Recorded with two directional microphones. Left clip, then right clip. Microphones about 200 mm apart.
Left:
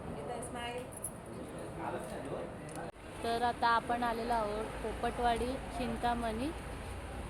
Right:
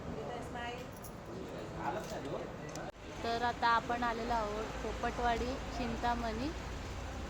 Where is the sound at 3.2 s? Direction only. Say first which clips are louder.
Left 1 dB; 20° left (ahead or behind).